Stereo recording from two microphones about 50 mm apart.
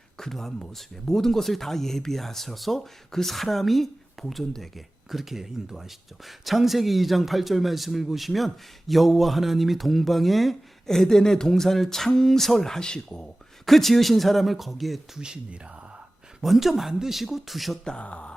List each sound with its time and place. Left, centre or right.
0.2 s speech: centre
13.7 s speech: centre
16.4 s speech: centre
17.8 s speech: left